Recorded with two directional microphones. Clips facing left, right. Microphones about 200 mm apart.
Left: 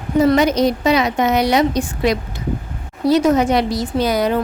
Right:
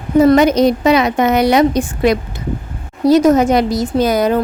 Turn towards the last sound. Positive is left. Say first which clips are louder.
# right 4 dB
turn(degrees=-45)  # may be behind; listen again after turning